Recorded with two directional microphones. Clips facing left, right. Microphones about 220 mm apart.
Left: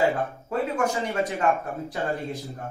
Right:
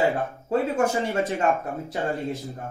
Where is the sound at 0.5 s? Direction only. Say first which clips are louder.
Right 4 dB; 30° right (ahead or behind).